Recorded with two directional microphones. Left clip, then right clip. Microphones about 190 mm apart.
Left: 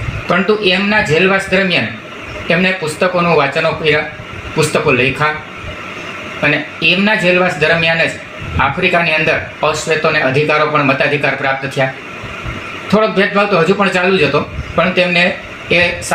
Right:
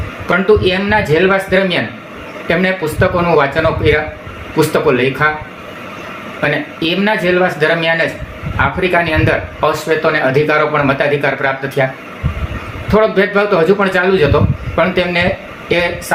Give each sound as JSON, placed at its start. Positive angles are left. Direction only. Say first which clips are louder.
{"t": 0.3, "sound": "speech", "louder": "right 1 dB", "side_deg": -15}
{"t": 6.4, "sound": "speech", "louder": "left 3 dB", "side_deg": -15}
{"t": 12.9, "sound": "speech", "louder": "right 1 dB", "side_deg": -15}